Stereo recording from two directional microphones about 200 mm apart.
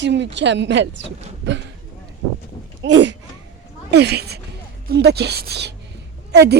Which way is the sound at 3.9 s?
55° right (ahead or behind).